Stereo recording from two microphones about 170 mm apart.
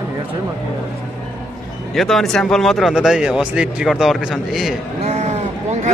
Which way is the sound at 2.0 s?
Centre (ahead or behind).